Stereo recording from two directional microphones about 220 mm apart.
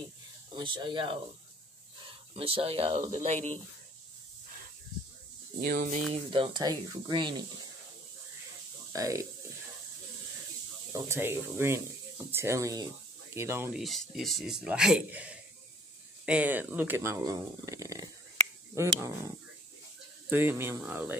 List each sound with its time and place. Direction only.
0.6 s speech: 20° right (ahead or behind)
5.6 s speech: 40° right (ahead or behind)
6.1 s speech: 25° right (ahead or behind)
8.9 s speech: 15° right (ahead or behind)
10.9 s speech: 10° right (ahead or behind)
13.8 s speech: centre (ahead or behind); by 18.1 s 15° right (ahead or behind)
20.2 s speech: 10° right (ahead or behind)